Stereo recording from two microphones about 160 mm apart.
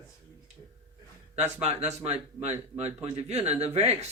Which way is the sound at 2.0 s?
40° right (ahead or behind).